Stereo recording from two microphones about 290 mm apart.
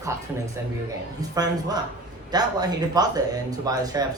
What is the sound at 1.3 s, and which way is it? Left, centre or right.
Speech, centre.